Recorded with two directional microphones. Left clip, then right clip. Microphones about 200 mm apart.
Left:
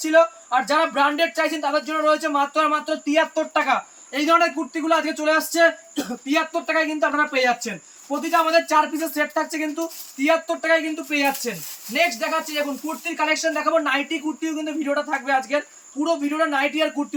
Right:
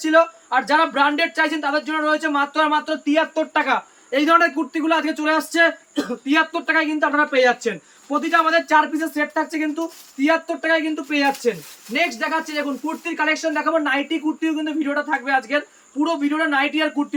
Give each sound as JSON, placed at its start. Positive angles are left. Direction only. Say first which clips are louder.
{"t": 0.0, "sound": "speech", "louder": "right 1 dB", "side_deg": -5}